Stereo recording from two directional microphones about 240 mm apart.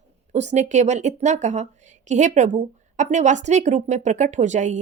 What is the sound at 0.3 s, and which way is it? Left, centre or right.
A woman's voice, right.